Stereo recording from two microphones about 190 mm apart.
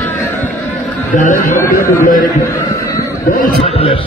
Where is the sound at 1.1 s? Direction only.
45° left (ahead or behind).